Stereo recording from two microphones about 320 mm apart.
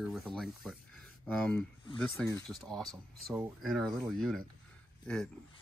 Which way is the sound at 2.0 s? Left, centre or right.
Centre.